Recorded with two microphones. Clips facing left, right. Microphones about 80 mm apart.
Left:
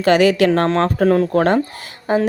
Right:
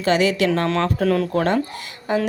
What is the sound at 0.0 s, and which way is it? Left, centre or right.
Speech, left.